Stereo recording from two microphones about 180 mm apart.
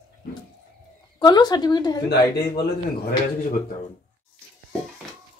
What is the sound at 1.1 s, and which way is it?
Speech, 20° left (ahead or behind).